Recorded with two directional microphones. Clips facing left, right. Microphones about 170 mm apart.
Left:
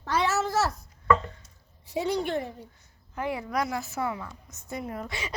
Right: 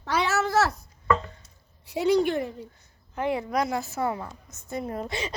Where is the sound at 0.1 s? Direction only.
75° right (ahead or behind).